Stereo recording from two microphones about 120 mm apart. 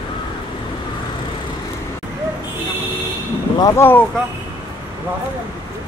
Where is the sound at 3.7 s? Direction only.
20° left (ahead or behind).